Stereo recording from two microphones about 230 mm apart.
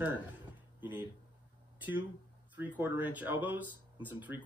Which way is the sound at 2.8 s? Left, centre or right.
Centre.